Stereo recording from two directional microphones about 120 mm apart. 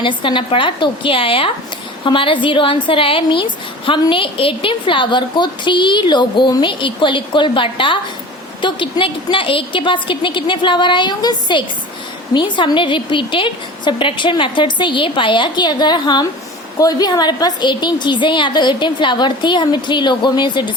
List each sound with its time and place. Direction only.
0.0 s a woman's voice: 40° left (ahead or behind)